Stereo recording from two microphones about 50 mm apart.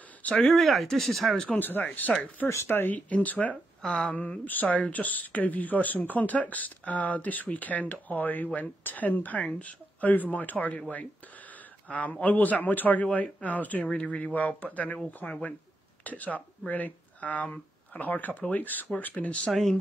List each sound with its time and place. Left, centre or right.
0.4 s speech: centre
1.6 s speech: left
2.7 s speech: left
3.1 s speech: left
11.9 s speech: left
19.5 s speech: centre